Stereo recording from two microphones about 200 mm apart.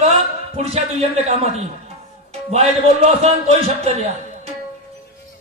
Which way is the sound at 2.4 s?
30° right (ahead or behind).